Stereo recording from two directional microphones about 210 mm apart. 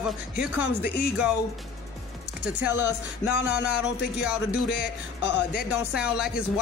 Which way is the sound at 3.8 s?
5° right (ahead or behind).